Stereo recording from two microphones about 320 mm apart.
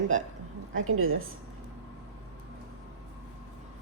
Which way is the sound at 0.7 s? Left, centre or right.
Right.